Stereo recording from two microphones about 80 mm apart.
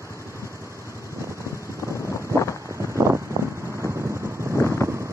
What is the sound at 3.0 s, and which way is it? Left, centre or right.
Vehicle, right.